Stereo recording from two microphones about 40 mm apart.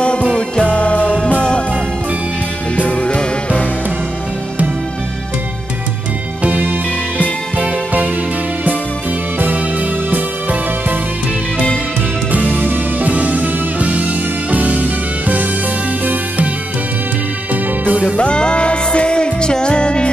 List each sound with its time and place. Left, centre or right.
0.0 s music: left
2.9 s music: left
6.4 s music: right
9.4 s music: right
12.3 s music: right
18.1 s music: left